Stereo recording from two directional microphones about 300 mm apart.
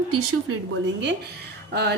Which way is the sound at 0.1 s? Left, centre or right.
Right.